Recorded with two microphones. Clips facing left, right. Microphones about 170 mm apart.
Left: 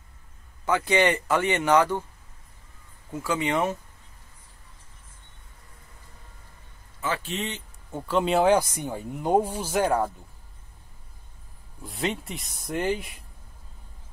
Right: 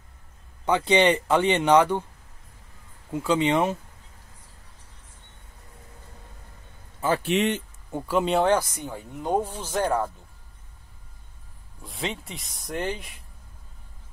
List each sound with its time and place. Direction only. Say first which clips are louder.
0.7 s speech: right 2 dB; 20° right (ahead or behind)
3.1 s speech: right 4 dB; 15° right (ahead or behind)
7.2 s speech: right 9 dB; 65° right (ahead or behind)
8.2 s speech: left 1 dB; centre (ahead or behind)
11.8 s speech: left 3 dB; centre (ahead or behind)